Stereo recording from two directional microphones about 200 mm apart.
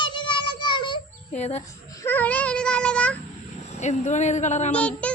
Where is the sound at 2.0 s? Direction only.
10° left (ahead or behind).